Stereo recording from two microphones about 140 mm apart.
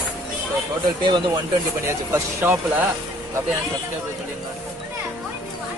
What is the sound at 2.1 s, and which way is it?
Speech, 15° right (ahead or behind).